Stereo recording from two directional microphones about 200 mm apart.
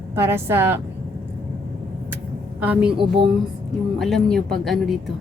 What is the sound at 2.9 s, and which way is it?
Speech, 25° right (ahead or behind).